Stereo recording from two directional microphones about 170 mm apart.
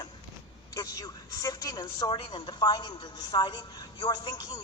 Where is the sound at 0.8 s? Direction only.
20° left (ahead or behind).